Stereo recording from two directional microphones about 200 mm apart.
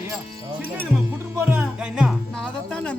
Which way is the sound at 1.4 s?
10° right (ahead or behind).